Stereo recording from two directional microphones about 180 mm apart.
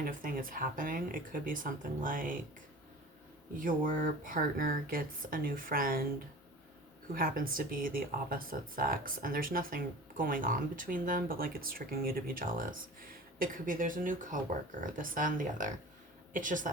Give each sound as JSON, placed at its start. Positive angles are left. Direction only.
{"t": 0.0, "sound": "speech", "side_deg": -50}
{"t": 3.6, "sound": "speech", "side_deg": -50}
{"t": 7.1, "sound": "speech", "side_deg": -55}